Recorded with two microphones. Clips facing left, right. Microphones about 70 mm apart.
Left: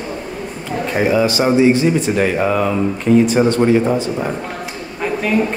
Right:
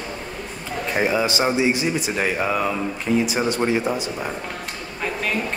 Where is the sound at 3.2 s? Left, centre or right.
Centre.